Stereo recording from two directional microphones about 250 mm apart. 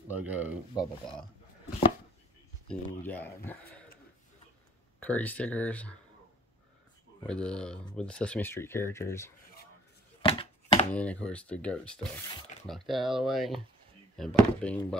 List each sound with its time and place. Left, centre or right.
0.1 s speech: centre
2.7 s speech: centre
5.0 s speech: centre
7.2 s speech: centre
10.2 s a sound: left
10.9 s speech: centre